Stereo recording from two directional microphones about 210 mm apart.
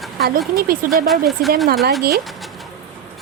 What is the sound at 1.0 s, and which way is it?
Speech, centre (ahead or behind).